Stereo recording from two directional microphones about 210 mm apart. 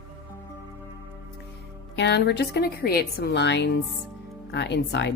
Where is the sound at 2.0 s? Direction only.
55° left (ahead or behind).